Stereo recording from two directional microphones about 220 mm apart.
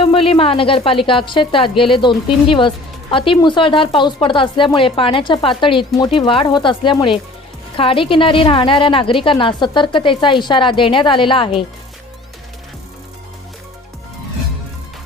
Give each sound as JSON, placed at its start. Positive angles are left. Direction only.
{"t": 0.0, "sound": "speech", "side_deg": 25}